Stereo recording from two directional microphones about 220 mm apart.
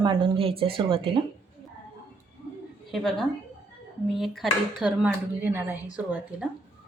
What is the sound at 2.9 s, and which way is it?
A woman's voice, centre (ahead or behind).